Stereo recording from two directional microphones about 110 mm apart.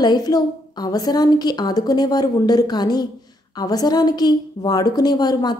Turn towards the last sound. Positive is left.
turn(degrees=40)  # may be behind; listen again after turning